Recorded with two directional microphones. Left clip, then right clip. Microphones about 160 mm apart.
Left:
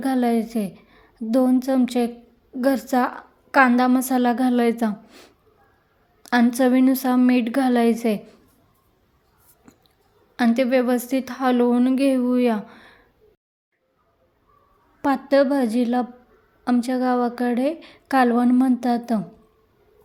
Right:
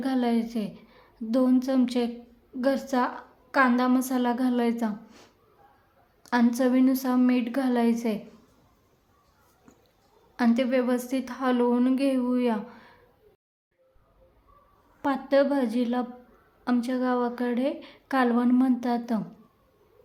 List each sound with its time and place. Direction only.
0.0 s a woman's voice: 30° left (ahead or behind)
10.3 s a woman's voice: 30° left (ahead or behind)
15.0 s a woman's voice: 35° left (ahead or behind)